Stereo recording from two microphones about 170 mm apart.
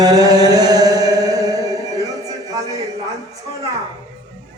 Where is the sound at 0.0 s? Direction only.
20° right (ahead or behind).